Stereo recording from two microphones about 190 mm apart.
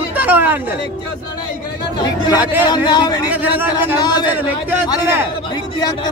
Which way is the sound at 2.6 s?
20° left (ahead or behind).